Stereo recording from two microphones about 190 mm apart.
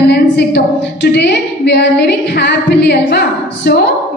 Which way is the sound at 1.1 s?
60° left (ahead or behind).